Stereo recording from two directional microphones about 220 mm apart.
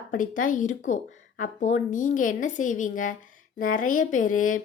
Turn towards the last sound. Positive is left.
turn(degrees=35)  # may be behind; listen again after turning